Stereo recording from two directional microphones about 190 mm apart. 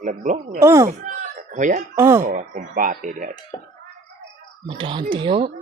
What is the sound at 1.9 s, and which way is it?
Speech, 15° right (ahead or behind).